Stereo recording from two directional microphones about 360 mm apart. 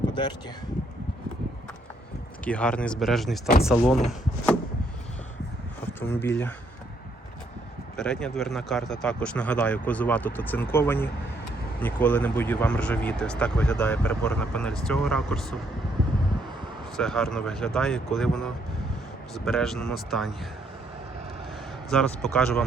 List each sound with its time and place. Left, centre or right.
0.1 s speech: centre
2.4 s speech: centre
6.0 s speech: centre
7.9 s speech: centre
17.0 s speech: centre
21.8 s speech: centre